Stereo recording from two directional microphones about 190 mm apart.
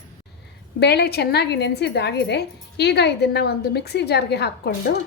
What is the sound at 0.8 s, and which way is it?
A woman's voice, 60° left (ahead or behind).